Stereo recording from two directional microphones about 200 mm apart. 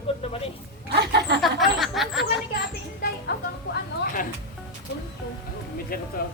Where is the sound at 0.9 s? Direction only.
55° right (ahead or behind).